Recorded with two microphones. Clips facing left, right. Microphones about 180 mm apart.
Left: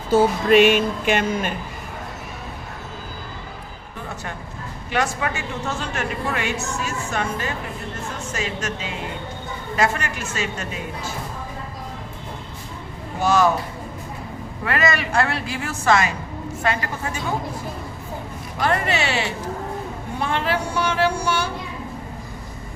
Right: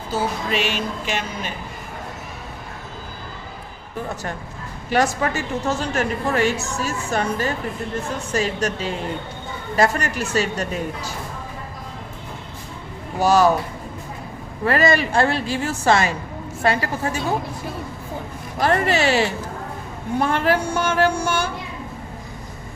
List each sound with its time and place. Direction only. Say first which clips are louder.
0.1 s music: left 8 dB; 55° left (ahead or behind)
4.9 s a woman's voice: right 4 dB; 40° right (ahead or behind)
13.1 s a woman's voice: right 2 dB; 35° right (ahead or behind)
14.6 s a woman's voice: right 5 dB; 35° right (ahead or behind)
18.6 s a woman's voice: right 3 dB; 35° right (ahead or behind)